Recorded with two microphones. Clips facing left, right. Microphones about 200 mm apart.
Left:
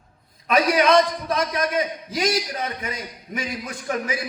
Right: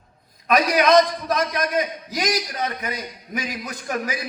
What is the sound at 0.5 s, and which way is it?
A man's voice, 30° left (ahead or behind).